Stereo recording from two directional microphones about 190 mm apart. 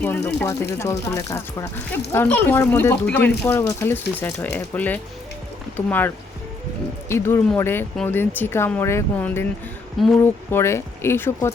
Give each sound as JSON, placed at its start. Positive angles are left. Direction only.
{"t": 0.0, "sound": "speech", "side_deg": 10}
{"t": 7.1, "sound": "speech", "side_deg": 15}
{"t": 10.5, "sound": "speech", "side_deg": 15}